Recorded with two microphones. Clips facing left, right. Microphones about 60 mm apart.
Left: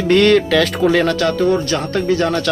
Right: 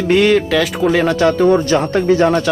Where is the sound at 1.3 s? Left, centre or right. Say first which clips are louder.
Right 4 dB; right.